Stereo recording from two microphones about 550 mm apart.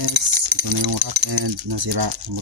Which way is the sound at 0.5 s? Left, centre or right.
Right.